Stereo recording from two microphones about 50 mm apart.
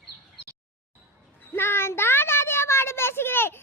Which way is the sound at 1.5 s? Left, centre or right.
Left.